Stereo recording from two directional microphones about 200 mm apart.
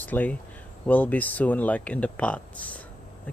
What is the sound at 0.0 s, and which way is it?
Speech, 10° left (ahead or behind).